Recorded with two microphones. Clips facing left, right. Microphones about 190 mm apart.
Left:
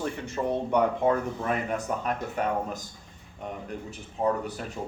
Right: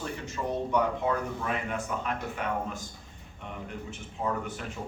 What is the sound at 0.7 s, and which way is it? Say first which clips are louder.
Speech: left 4 dB; 45° left (ahead or behind).